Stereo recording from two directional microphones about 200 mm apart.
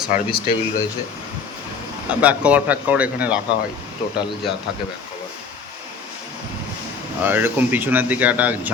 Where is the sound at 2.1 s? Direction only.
5° right (ahead or behind).